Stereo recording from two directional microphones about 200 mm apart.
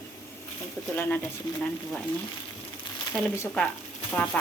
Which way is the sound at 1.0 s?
10° left (ahead or behind).